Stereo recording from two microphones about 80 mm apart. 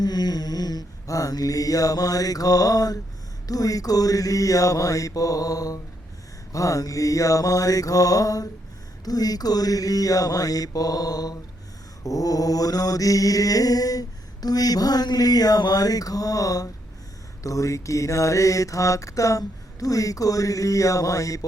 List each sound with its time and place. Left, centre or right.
0.0 s mantra: left